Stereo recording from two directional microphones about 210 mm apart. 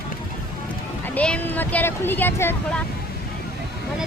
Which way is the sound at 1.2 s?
5° left (ahead or behind).